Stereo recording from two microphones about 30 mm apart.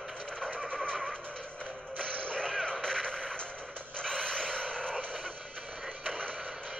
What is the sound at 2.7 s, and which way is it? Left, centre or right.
Artillery fire, left.